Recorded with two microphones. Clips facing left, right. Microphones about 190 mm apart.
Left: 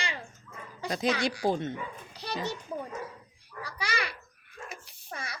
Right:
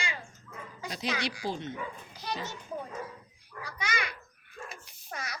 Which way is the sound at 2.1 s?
75° left (ahead or behind).